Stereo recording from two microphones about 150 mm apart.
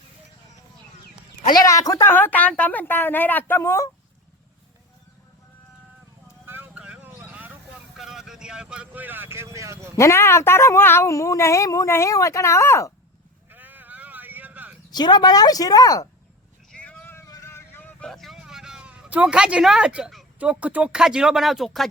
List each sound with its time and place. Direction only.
1.5 s speech: 20° left (ahead or behind)
6.4 s vehicle: 15° right (ahead or behind)
7.9 s speech: centre (ahead or behind); by 9.9 s 20° right (ahead or behind)
9.9 s speech: 15° left (ahead or behind)
13.5 s sheep: 10° right (ahead or behind)
14.8 s speech: 30° left (ahead or behind)
16.7 s vehicle: 10° left (ahead or behind)
18.1 s speech: centre (ahead or behind)